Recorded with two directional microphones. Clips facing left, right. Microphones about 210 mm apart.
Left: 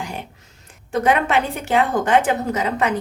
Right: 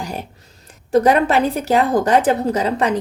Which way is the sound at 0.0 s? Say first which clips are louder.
Right 3 dB; 40° right (ahead or behind).